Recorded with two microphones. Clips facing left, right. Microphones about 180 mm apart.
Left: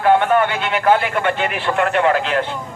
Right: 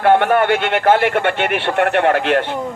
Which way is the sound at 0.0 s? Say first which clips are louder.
Right 1 dB; 65° right (ahead or behind).